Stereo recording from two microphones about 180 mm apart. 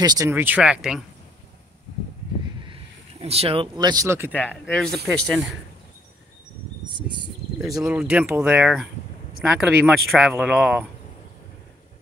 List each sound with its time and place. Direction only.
0.0 s speech: 20° right (ahead or behind); by 1.0 s 5° right (ahead or behind)
2.6 s speech: 30° right (ahead or behind); by 4.5 s 10° right (ahead or behind)
4.5 s speech: 5° left (ahead or behind)
7.6 s speech: 5° right (ahead or behind)